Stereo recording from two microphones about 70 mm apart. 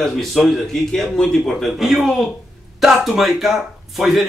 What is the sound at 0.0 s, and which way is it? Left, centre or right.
Speech, centre.